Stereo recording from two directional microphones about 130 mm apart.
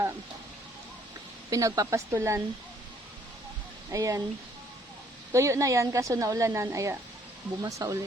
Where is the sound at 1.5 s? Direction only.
25° right (ahead or behind).